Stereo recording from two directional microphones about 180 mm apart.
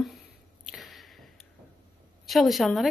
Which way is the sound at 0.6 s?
Centre (ahead or behind).